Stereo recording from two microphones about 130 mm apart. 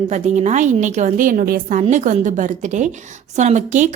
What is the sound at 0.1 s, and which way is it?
A woman's voice, 65° right (ahead or behind).